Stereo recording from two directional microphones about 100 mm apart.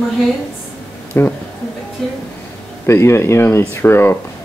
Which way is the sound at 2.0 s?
5° left (ahead or behind).